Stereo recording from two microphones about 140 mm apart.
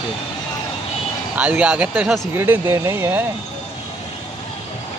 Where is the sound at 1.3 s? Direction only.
10° right (ahead or behind).